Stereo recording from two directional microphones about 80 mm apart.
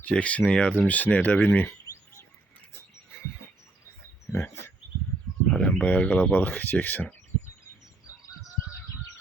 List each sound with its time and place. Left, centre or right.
0.0 s speech: centre
5.5 s a sound: centre
5.8 s speech: centre